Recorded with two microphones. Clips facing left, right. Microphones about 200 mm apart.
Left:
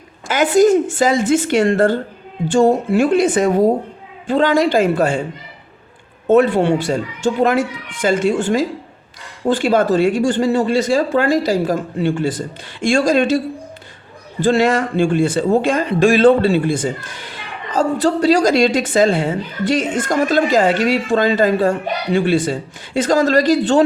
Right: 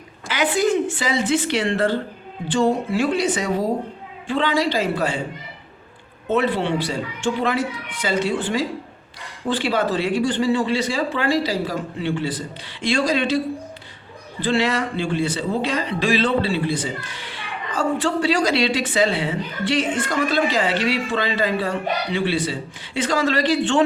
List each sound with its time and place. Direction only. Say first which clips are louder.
0.3 s speech: left 8 dB; 45° left (ahead or behind)
6.2 s speech: left 8 dB; 45° left (ahead or behind)
14.4 s speech: left 6 dB; 45° left (ahead or behind)